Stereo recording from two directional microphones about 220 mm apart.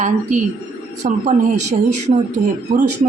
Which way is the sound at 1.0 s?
30° right (ahead or behind).